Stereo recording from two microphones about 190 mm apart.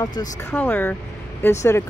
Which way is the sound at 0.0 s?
20° left (ahead or behind).